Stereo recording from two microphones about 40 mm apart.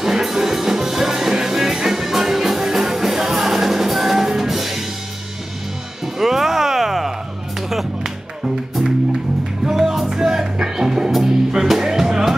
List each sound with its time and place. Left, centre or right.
0.0 s music: centre
6.1 s music: centre
9.7 s music: centre